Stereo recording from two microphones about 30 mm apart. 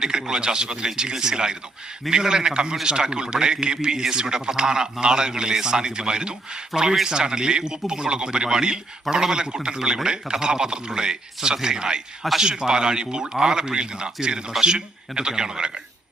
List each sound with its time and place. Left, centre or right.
0.0 s a man's voice: right